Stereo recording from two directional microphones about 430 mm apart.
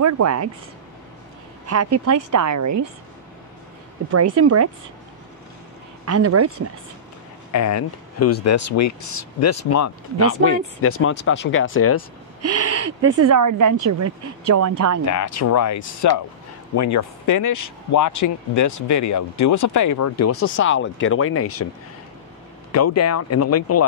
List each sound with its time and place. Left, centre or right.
0.0 s speech: right
1.7 s speech: right
4.1 s speech: right
6.0 s speech: right
7.5 s speech: left
12.4 s speech: right
15.0 s speech: left
22.7 s speech: left